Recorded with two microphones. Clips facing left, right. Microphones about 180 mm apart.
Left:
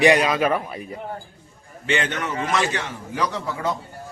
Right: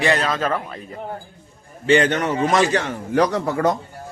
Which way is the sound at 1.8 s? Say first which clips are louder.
Right 8 dB; 40° right (ahead or behind).